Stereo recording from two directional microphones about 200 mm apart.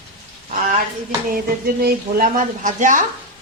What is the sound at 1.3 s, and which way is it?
A woman's voice, 50° right (ahead or behind).